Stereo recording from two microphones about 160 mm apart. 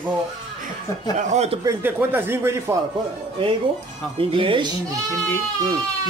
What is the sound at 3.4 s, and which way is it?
Speech, 35° right (ahead or behind).